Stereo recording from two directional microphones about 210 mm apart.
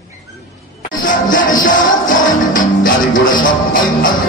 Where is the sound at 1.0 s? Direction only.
40° left (ahead or behind).